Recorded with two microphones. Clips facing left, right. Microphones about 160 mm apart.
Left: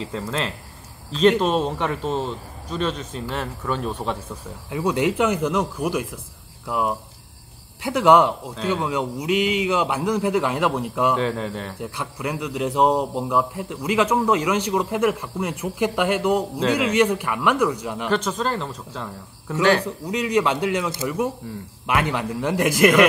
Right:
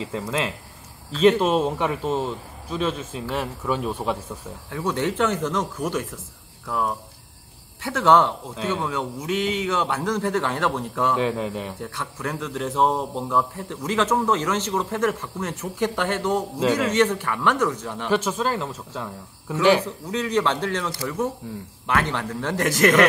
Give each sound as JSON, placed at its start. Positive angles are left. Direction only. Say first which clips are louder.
{"t": 0.1, "sound": "a man's voice", "louder": "even", "side_deg": -10}
{"t": 1.4, "sound": "a man's voice", "louder": "even", "side_deg": -5}
{"t": 4.6, "sound": "a man's voice", "louder": "left 3 dB", "side_deg": 15}
{"t": 11.1, "sound": "a man's voice", "louder": "even", "side_deg": -10}
{"t": 11.8, "sound": "a man's voice", "louder": "left 2 dB", "side_deg": 10}
{"t": 18.1, "sound": "a man's voice", "louder": "right 1 dB", "side_deg": -10}
{"t": 19.8, "sound": "a man's voice", "louder": "left 2 dB", "side_deg": 15}
{"t": 20.9, "sound": "a man's voice", "louder": "left 2 dB", "side_deg": 20}